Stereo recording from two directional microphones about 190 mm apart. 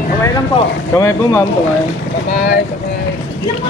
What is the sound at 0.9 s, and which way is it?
Speech, 15° left (ahead or behind).